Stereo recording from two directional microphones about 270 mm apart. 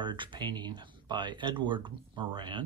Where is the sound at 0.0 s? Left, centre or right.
Centre.